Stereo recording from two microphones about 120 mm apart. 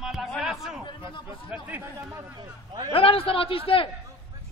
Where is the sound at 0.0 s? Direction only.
5° right (ahead or behind).